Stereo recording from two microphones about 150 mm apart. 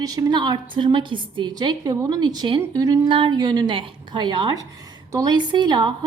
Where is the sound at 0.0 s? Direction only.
25° right (ahead or behind).